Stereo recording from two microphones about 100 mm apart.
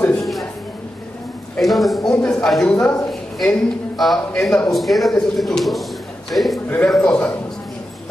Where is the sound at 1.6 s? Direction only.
Centre (ahead or behind).